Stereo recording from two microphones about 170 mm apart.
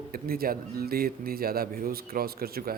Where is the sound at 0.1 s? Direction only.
60° right (ahead or behind).